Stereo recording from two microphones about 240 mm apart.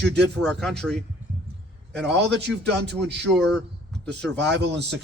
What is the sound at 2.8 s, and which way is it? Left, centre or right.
Speech, right.